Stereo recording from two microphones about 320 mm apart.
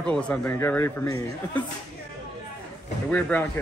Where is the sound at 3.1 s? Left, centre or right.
Centre.